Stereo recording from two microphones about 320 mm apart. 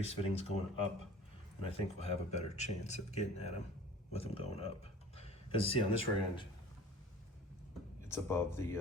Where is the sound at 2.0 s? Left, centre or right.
Centre.